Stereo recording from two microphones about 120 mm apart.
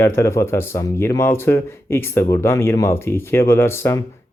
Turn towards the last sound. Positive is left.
turn(degrees=20)  # may be behind; listen again after turning